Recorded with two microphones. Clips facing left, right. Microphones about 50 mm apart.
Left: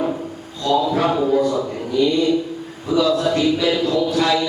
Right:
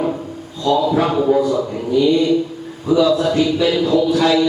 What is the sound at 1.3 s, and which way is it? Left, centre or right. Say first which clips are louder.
Speech: right 2 dB; centre.